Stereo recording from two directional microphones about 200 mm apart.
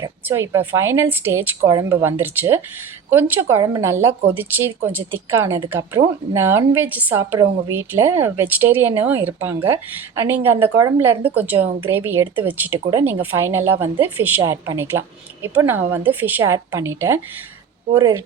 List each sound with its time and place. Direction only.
0.0 s a woman's voice: 10° right (ahead or behind)